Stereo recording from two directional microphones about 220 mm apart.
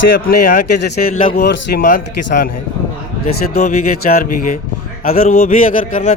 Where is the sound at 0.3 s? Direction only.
45° left (ahead or behind).